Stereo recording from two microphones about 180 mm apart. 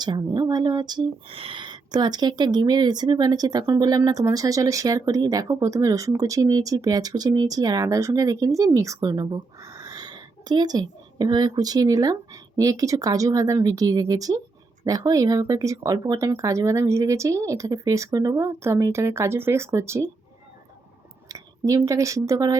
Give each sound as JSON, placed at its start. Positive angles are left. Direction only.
{"t": 0.0, "sound": "speech", "side_deg": -20}
{"t": 21.2, "sound": "speech", "side_deg": -20}